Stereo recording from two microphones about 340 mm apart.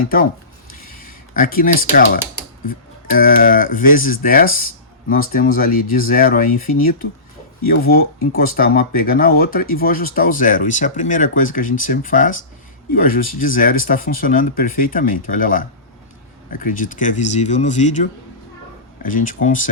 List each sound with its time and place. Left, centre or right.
0.9 s a sound: left
2.6 s speech: left
7.7 s speech: left